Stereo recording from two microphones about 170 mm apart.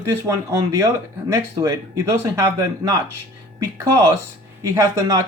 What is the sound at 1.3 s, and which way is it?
Speech, 20° right (ahead or behind).